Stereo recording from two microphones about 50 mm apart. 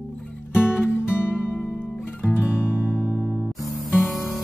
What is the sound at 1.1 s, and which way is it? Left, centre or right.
Music, left.